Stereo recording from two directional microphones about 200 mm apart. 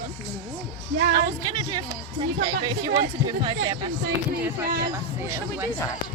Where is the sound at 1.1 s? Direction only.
20° right (ahead or behind).